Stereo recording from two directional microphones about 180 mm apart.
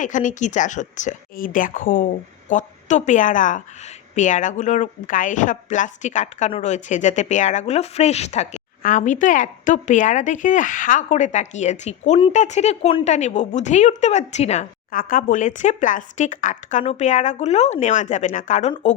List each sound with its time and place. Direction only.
0.0 s a woman's voice: 45° left (ahead or behind)